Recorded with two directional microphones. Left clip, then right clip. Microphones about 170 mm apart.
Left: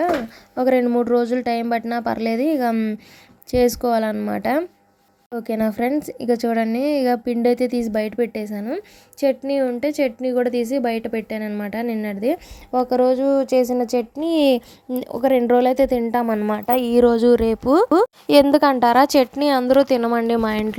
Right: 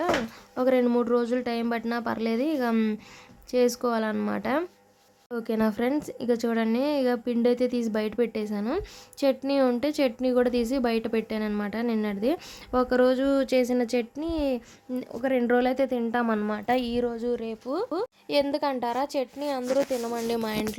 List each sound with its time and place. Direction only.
0.5 s speech: 20° left (ahead or behind)
2.7 s a woman's voice: 10° left (ahead or behind)
3.5 s a woman's voice: 25° left (ahead or behind)
14.3 s a woman's voice: 40° left (ahead or behind); by 16.2 s 25° left (ahead or behind)
16.2 s a woman's voice: 5° left (ahead or behind)
16.9 s a woman's voice: 40° left (ahead or behind)
18.4 s a woman's voice: 35° left (ahead or behind)
20.1 s speech: 20° left (ahead or behind)